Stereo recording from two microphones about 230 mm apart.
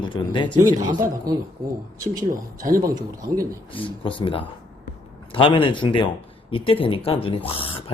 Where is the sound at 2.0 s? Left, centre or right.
Centre.